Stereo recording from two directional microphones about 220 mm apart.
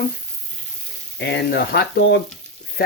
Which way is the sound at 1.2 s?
50° left (ahead or behind).